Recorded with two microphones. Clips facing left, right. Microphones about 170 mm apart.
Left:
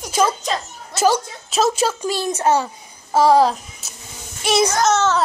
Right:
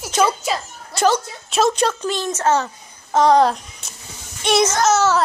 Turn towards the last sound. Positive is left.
turn(degrees=-5)  # may be behind; listen again after turning